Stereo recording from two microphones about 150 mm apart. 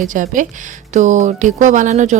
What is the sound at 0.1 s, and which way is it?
Speech, 60° right (ahead or behind).